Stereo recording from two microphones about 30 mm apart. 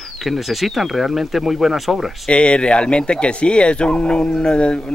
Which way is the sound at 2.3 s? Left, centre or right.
Left.